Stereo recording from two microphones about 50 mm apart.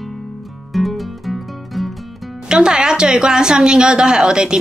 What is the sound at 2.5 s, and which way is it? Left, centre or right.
A woman's voice, centre.